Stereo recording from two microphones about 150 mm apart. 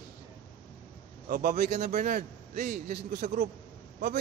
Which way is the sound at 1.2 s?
70° right (ahead or behind).